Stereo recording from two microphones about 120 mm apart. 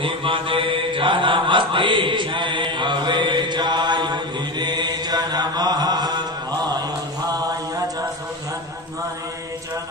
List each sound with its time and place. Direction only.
0.0 s mantra: 45° right (ahead or behind)